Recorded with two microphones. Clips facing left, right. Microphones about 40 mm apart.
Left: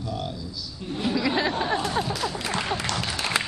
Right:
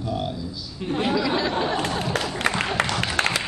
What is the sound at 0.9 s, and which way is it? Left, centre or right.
Speech, right.